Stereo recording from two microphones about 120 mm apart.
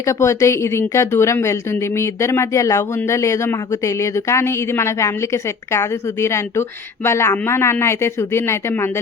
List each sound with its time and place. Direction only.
0.0 s a woman's voice: 25° left (ahead or behind)